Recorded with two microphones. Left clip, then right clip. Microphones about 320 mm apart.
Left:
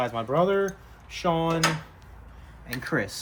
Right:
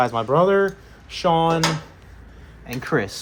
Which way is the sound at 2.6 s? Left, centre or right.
Centre.